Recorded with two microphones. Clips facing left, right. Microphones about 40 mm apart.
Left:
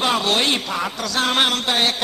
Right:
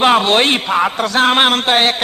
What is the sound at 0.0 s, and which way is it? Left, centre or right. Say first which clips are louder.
A man's voice: right 7 dB; right.